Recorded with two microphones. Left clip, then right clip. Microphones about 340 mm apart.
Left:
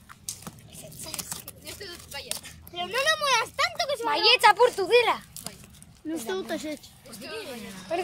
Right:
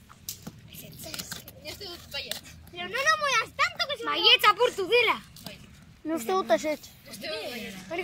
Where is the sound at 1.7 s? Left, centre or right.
Centre.